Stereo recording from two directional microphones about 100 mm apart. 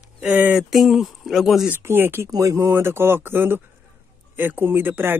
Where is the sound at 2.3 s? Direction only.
35° right (ahead or behind).